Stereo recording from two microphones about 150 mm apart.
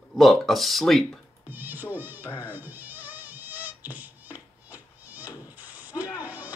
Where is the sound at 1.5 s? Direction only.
10° right (ahead or behind).